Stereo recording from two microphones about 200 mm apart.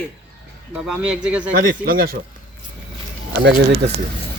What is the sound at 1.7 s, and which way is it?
Speech, 50° right (ahead or behind).